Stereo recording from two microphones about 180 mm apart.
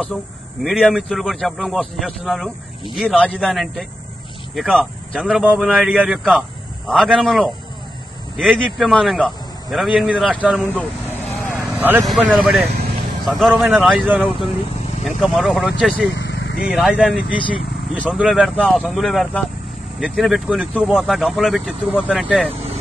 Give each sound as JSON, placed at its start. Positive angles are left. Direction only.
{"t": 0.7, "sound": "speech", "side_deg": 0}
{"t": 10.7, "sound": "vehicle", "side_deg": -10}
{"t": 12.1, "sound": "speech", "side_deg": -5}
{"t": 16.1, "sound": "vehicle", "side_deg": 75}
{"t": 16.6, "sound": "speech", "side_deg": -5}